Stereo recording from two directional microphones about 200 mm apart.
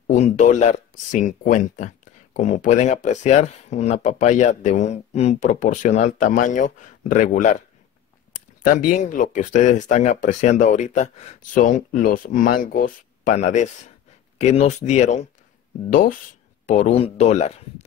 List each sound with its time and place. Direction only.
0.0 s speech: 35° left (ahead or behind)
8.6 s speech: 40° left (ahead or behind)